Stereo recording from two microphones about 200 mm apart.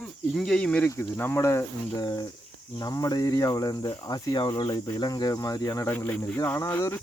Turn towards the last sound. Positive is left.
turn(degrees=15)  # may be behind; listen again after turning